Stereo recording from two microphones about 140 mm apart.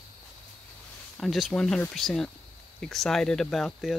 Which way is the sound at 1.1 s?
Centre (ahead or behind).